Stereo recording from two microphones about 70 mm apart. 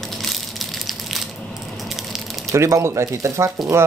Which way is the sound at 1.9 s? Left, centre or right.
Centre.